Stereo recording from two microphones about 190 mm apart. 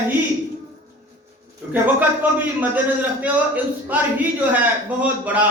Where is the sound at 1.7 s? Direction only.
10° right (ahead or behind).